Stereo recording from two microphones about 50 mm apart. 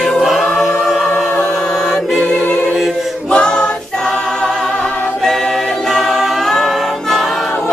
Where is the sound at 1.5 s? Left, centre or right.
Centre.